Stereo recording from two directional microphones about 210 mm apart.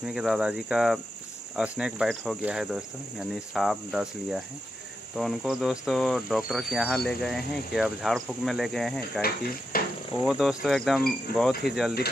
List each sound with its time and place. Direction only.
0.0 s speech: 5° right (ahead or behind)
9.7 s cricket: 45° left (ahead or behind)
10.2 s speech: 5° right (ahead or behind)